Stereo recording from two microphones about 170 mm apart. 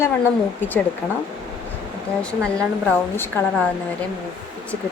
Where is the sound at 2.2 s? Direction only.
5° left (ahead or behind).